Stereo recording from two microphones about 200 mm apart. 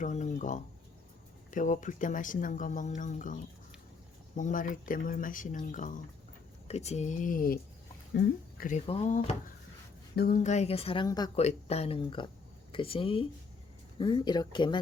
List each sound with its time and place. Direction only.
0.0 s speech: 40° left (ahead or behind)
8.9 s speech: 35° left (ahead or behind)
11.3 s speech: 30° left (ahead or behind)